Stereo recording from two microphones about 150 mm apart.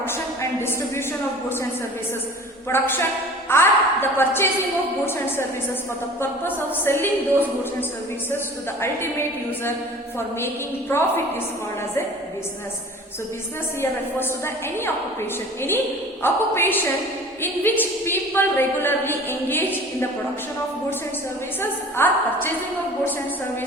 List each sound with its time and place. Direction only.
2.7 s a woman's voice: 15° left (ahead or behind)
10.2 s a woman's voice: 15° left (ahead or behind)
14.2 s a woman's voice: 15° left (ahead or behind)
16.2 s a woman's voice: 15° left (ahead or behind)
21.6 s a woman's voice: 15° left (ahead or behind)